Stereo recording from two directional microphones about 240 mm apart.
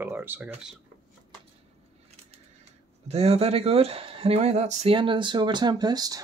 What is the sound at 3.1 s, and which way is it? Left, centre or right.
Speech, right.